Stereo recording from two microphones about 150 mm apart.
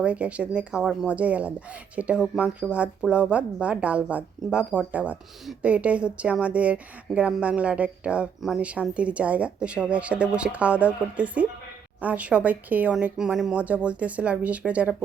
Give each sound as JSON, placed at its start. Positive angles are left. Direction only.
{"t": 0.0, "sound": "speech", "side_deg": -10}